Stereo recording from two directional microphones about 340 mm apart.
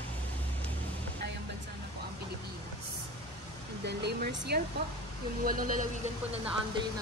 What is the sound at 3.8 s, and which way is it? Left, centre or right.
Speech, right.